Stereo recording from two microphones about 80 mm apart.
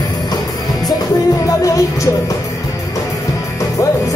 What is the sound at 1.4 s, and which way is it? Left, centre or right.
Music, left.